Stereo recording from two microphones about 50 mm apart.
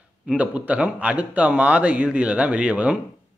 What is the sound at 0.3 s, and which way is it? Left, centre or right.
Speech, right.